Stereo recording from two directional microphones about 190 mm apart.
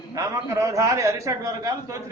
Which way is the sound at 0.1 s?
15° right (ahead or behind).